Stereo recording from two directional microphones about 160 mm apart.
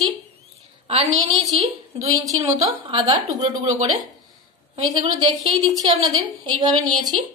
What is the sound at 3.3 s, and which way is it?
Speech, 45° right (ahead or behind).